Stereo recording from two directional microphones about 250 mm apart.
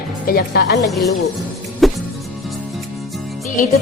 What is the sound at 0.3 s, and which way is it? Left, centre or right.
Speech, left.